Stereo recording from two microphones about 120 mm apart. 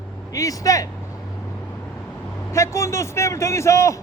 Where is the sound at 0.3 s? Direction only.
30° left (ahead or behind).